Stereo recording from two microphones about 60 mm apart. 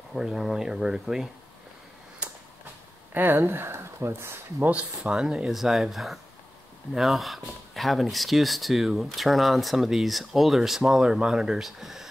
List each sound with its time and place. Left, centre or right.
0.1 s speech: centre
3.1 s speech: right
4.6 s speech: right
5.5 s speech: centre